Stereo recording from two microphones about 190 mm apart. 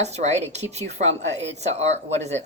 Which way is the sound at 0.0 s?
35° right (ahead or behind).